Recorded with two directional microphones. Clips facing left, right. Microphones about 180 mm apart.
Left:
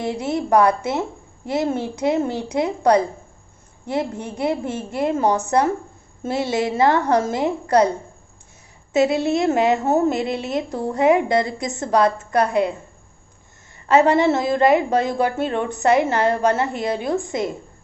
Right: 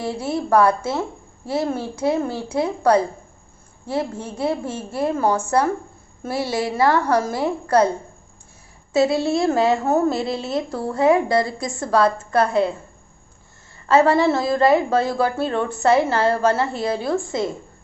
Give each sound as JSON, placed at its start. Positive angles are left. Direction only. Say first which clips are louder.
{"t": 0.0, "sound": "a woman's voice", "louder": "left 1 dB", "side_deg": 20}
{"t": 8.9, "sound": "a woman's voice", "louder": "even", "side_deg": 20}
{"t": 13.8, "sound": "a woman's voice", "louder": "even", "side_deg": 20}